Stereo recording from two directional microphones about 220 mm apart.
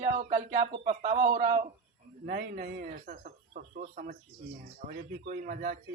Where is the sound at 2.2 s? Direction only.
40° right (ahead or behind).